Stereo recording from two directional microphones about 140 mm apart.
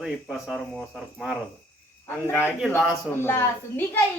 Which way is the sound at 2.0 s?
15° left (ahead or behind).